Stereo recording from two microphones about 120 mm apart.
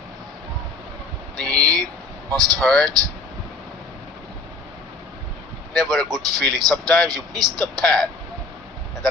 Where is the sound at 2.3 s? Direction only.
30° right (ahead or behind).